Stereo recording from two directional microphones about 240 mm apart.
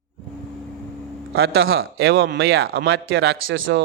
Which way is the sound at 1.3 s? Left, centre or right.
Right.